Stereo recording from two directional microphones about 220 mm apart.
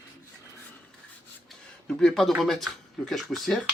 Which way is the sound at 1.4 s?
5° left (ahead or behind).